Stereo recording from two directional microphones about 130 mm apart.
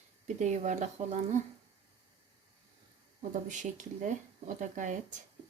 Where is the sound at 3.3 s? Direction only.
70° right (ahead or behind).